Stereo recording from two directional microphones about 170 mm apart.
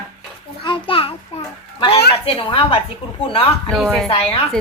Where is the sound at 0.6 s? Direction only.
30° left (ahead or behind).